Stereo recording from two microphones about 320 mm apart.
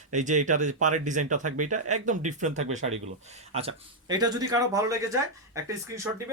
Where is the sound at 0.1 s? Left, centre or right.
Right.